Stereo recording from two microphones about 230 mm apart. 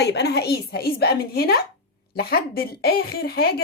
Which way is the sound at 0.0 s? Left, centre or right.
Left.